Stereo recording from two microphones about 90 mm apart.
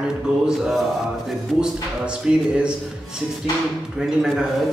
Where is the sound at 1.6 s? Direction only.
10° right (ahead or behind).